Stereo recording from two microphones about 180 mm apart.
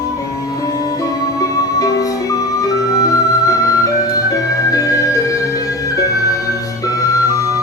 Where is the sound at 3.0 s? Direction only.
20° left (ahead or behind).